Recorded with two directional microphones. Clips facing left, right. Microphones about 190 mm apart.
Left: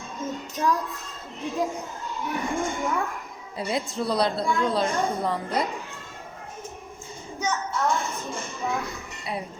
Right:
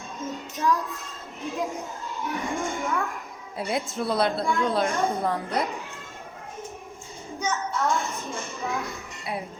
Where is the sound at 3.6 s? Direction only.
Centre (ahead or behind).